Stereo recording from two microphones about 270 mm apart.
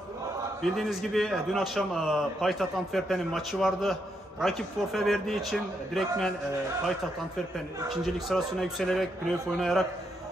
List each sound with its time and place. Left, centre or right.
0.6 s a man's voice: centre
7.9 s a man's voice: centre